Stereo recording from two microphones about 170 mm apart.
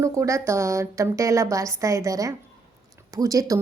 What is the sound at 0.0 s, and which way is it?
A woman's voice, 20° right (ahead or behind).